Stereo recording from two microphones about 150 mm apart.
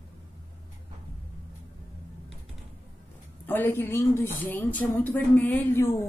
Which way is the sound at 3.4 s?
10° left (ahead or behind).